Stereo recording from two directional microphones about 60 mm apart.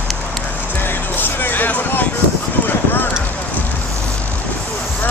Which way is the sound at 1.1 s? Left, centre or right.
Left.